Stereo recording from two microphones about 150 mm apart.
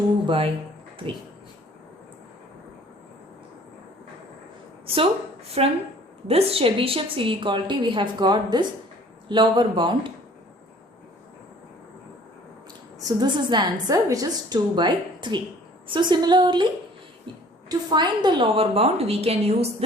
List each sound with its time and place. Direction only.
0.3 s a woman's voice: 40° right (ahead or behind)
5.6 s a woman's voice: 40° right (ahead or behind)
13.0 s a woman's voice: 25° right (ahead or behind)
17.7 s a woman's voice: 30° right (ahead or behind)